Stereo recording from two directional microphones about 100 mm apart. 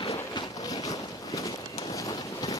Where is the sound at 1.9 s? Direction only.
35° left (ahead or behind).